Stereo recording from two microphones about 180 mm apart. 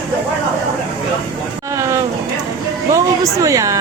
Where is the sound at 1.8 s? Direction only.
15° right (ahead or behind).